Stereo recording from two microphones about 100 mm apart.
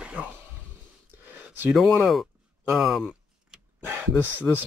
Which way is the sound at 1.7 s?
Centre (ahead or behind).